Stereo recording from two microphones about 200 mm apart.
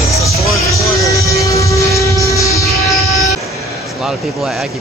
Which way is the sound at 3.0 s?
30° left (ahead or behind).